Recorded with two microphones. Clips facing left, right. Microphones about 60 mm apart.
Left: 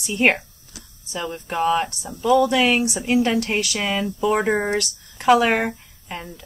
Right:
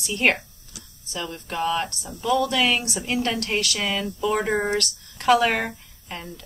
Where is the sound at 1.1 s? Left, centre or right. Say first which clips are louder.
Left 4 dB; centre.